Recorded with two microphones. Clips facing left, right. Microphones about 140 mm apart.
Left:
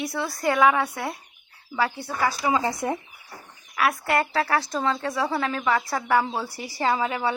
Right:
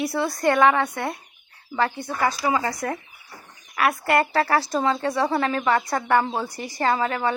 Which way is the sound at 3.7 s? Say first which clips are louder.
Right 2 dB; centre (ahead or behind).